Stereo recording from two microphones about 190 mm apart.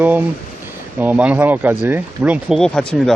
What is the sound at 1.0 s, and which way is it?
Speech, 10° right (ahead or behind).